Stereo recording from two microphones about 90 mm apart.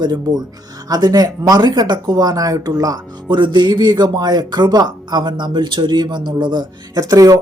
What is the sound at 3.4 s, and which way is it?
Speech, 60° right (ahead or behind).